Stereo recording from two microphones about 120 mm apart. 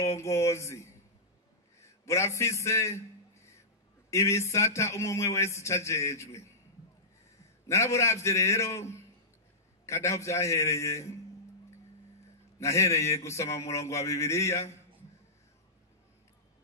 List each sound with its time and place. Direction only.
0.0 s a man's voice: 25° left (ahead or behind)
2.0 s a man's voice: 25° left (ahead or behind)
4.1 s a man's voice: 25° left (ahead or behind)
7.6 s a man's voice: 25° left (ahead or behind)
12.5 s a man's voice: 25° left (ahead or behind)